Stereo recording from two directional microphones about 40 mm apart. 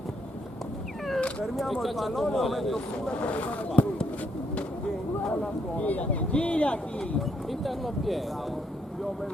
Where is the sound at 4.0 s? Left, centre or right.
Left.